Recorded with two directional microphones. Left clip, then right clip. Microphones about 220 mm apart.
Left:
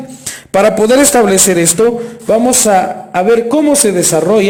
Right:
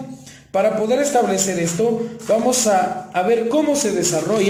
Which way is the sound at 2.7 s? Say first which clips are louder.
Left 7 dB; 45° left (ahead or behind).